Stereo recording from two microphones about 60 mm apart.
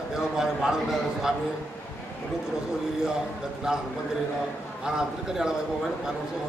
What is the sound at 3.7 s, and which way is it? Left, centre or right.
Speech, centre.